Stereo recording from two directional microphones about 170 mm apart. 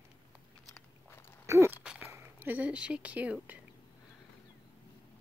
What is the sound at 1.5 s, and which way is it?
Speech, 15° right (ahead or behind).